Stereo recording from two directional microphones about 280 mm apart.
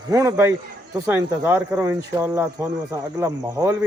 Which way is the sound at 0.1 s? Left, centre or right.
Centre.